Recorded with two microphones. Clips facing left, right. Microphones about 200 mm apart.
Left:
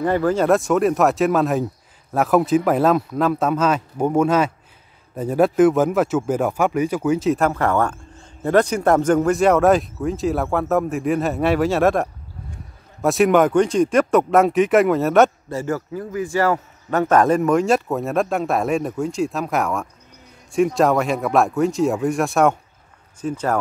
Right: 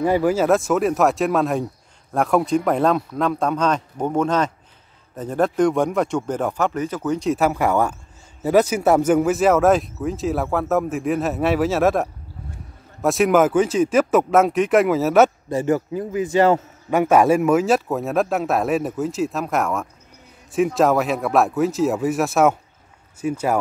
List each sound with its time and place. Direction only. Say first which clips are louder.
0.0 s a man's voice: even; 10° right (ahead or behind)
15.5 s a man's voice: right 4 dB; 20° right (ahead or behind)
16.9 s a man's voice: right 1 dB; 10° right (ahead or behind)